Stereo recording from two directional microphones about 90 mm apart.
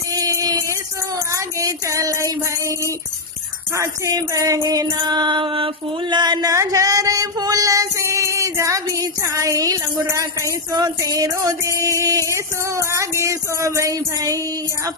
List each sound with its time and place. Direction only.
0.2 s music: 40° right (ahead or behind)
3.8 s female singing: 40° right (ahead or behind)
4.7 s music: 45° right (ahead or behind)
6.5 s female singing: 35° right (ahead or behind)